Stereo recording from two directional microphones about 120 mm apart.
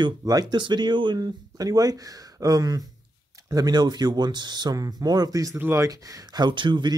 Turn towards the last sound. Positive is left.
turn(degrees=-40)  # may be behind; listen again after turning